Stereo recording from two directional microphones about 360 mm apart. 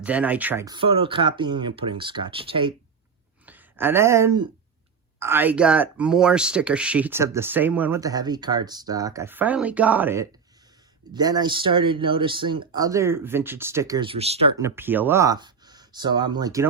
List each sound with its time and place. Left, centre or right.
0.0 s speech: centre